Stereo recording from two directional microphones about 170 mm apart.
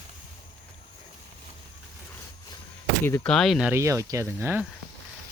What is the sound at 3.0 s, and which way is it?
Speech, 10° left (ahead or behind).